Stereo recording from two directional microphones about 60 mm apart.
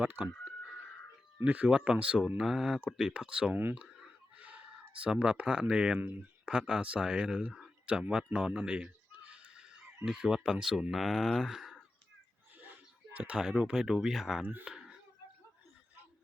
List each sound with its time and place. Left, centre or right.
0.0 s speech: right
1.5 s speech: right
3.5 s speech: right
4.4 s a sound: right
5.0 s speech: centre
6.0 s speech: right
6.5 s speech: centre
8.0 s neigh: centre
10.1 s speech: centre
13.1 s speech: right
14.6 s a sound: centre